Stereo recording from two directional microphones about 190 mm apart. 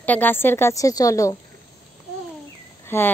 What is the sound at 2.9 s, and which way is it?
Speech, 10° left (ahead or behind).